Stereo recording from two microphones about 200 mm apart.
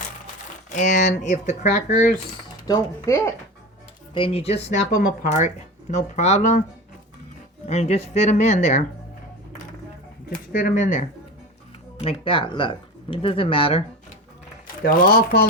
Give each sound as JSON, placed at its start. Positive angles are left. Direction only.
{"t": 0.7, "sound": "speech", "side_deg": 40}
{"t": 2.6, "sound": "speech", "side_deg": 15}
{"t": 4.1, "sound": "speech", "side_deg": 25}
{"t": 7.7, "sound": "speech", "side_deg": 35}
{"t": 10.5, "sound": "speech", "side_deg": 40}
{"t": 12.0, "sound": "speech", "side_deg": 25}
{"t": 14.8, "sound": "speech", "side_deg": 45}